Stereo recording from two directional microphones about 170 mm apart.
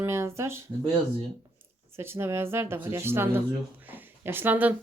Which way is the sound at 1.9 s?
15° right (ahead or behind).